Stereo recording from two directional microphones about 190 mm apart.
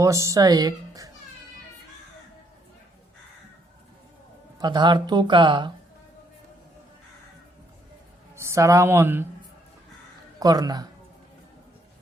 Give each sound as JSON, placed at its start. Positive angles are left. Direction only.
{"t": 0.0, "sound": "speech", "side_deg": -15}
{"t": 4.6, "sound": "speech", "side_deg": -25}
{"t": 8.4, "sound": "speech", "side_deg": -15}
{"t": 10.4, "sound": "speech", "side_deg": -20}